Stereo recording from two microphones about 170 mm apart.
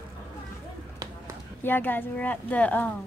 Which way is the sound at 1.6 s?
10° left (ahead or behind).